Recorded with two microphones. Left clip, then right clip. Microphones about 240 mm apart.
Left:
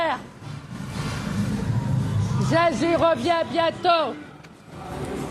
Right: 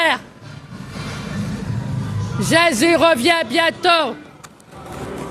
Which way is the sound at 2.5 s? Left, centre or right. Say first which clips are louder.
Right 6 dB; right.